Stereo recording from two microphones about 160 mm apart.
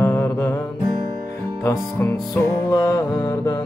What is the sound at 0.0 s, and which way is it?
Music, 15° left (ahead or behind).